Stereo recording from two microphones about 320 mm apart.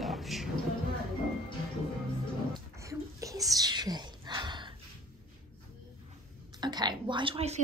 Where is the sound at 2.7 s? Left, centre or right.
Centre.